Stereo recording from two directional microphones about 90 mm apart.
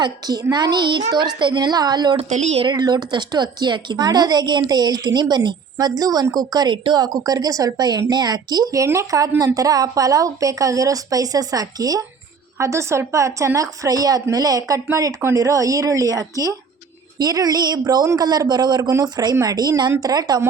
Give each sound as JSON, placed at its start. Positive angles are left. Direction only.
{"t": 0.0, "sound": "a woman's voice", "side_deg": -45}
{"t": 2.1, "sound": "speech", "side_deg": -90}
{"t": 2.7, "sound": "a woman's voice", "side_deg": -50}
{"t": 6.7, "sound": "a woman's voice", "side_deg": -55}